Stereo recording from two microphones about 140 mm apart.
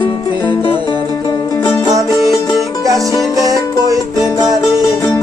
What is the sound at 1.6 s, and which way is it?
Music, 25° left (ahead or behind).